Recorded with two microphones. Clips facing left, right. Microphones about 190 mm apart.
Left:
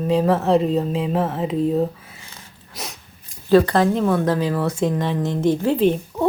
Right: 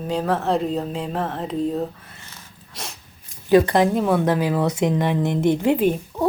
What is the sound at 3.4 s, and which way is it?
A woman's voice, 15° right (ahead or behind).